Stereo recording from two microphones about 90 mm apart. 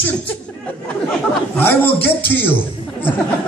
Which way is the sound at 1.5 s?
20° left (ahead or behind).